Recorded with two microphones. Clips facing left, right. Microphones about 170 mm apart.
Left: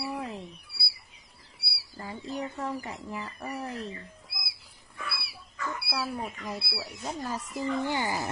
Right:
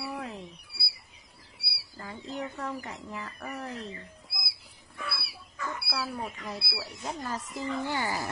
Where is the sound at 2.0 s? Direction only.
15° left (ahead or behind).